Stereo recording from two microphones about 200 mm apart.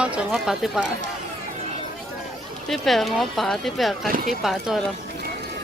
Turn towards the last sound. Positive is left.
turn(degrees=0)  # may be behind; listen again after turning